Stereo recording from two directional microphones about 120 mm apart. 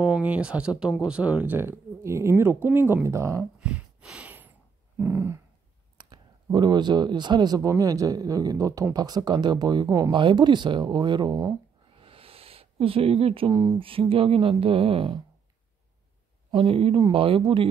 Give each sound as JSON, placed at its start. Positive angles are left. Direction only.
{"t": 0.0, "sound": "speech", "side_deg": -10}
{"t": 3.5, "sound": "a sound", "side_deg": -10}
{"t": 4.9, "sound": "speech", "side_deg": -20}
{"t": 5.9, "sound": "speech", "side_deg": -40}
{"t": 9.8, "sound": "speech", "side_deg": -25}
{"t": 10.1, "sound": "speech", "side_deg": -40}
{"t": 11.9, "sound": "a sound", "side_deg": -50}
{"t": 13.5, "sound": "speech", "side_deg": -30}
{"t": 13.7, "sound": "speech", "side_deg": -50}
{"t": 16.4, "sound": "speech", "side_deg": -45}